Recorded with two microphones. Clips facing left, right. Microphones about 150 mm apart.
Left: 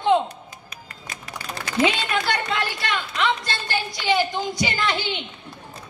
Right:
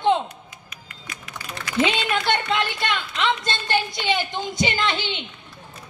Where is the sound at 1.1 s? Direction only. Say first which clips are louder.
Left 2 dB; 35° left (ahead or behind).